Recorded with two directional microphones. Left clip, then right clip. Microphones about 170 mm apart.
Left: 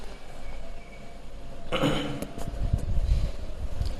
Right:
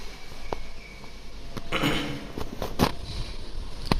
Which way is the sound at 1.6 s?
15° left (ahead or behind).